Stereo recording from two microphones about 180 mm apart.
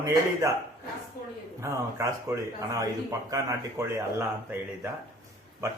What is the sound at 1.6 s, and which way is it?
A man's voice, 15° right (ahead or behind).